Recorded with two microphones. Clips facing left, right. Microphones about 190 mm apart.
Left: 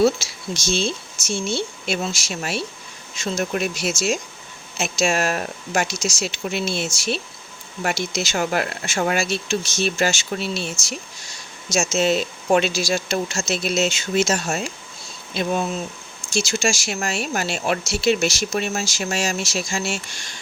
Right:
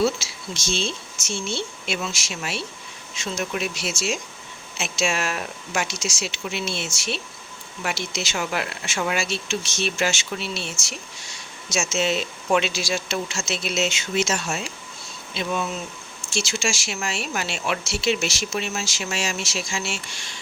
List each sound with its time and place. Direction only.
0.0 s speech: 40° left (ahead or behind)